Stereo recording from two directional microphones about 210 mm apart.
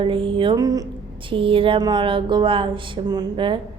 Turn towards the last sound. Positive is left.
turn(degrees=-25)  # may be behind; listen again after turning